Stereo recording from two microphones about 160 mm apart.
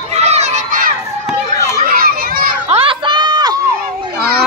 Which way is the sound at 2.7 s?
35° right (ahead or behind).